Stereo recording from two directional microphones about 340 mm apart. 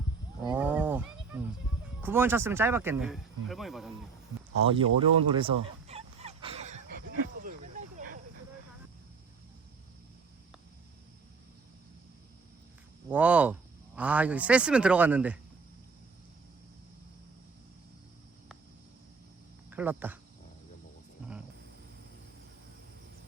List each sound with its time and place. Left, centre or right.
0.4 s wild animals: centre
2.0 s speech: centre
4.7 s fowl: centre
7.4 s snake: right
13.1 s speech: centre
19.7 s speech: centre